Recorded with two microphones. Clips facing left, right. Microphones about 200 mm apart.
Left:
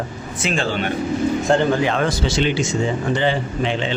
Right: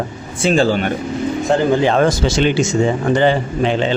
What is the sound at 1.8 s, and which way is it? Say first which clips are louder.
Speech: right 6 dB; 40° right (ahead or behind).